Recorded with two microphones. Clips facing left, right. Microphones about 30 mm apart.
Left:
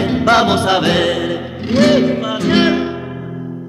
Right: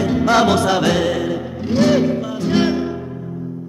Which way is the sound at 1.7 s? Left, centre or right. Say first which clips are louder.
Left 3 dB; left.